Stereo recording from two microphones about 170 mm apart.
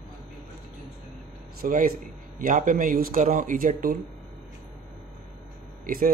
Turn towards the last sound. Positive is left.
turn(degrees=-55)  # may be behind; listen again after turning